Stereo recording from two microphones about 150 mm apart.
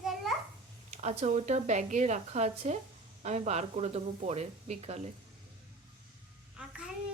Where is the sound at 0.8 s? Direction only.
50° right (ahead or behind).